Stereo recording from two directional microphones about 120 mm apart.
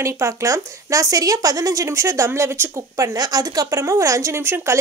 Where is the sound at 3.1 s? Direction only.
30° right (ahead or behind).